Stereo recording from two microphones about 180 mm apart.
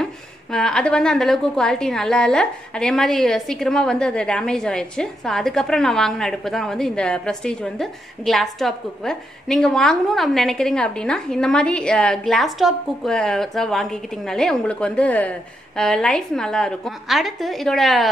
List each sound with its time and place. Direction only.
0.0 s a woman's voice: 5° left (ahead or behind)